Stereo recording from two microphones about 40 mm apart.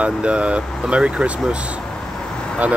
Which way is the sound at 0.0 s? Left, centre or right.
Right.